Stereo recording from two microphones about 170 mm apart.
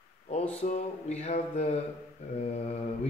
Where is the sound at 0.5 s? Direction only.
40° left (ahead or behind).